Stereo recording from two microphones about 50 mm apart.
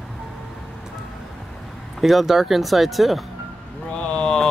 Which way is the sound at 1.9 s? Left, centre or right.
Centre.